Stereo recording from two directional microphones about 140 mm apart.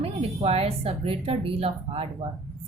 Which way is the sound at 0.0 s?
45° right (ahead or behind).